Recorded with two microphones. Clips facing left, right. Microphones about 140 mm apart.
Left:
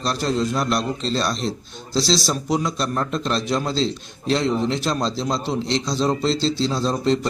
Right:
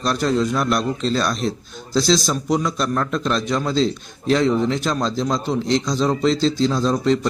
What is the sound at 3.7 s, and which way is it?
A man's voice, centre (ahead or behind).